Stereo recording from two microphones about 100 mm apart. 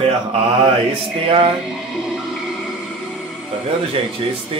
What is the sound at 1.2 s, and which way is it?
Speech, 60° right (ahead or behind).